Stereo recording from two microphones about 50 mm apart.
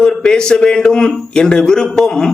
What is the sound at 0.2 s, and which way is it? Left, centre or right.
A man's voice, centre.